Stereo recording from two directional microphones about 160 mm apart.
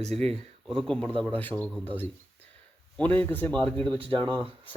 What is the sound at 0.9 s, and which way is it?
A man's voice, 5° left (ahead or behind).